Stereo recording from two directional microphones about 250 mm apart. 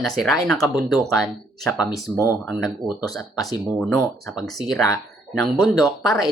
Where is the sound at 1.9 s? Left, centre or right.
Centre.